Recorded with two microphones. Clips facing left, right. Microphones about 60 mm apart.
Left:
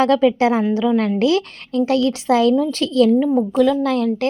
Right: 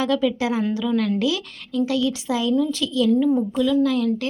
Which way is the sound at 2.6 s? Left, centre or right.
Left.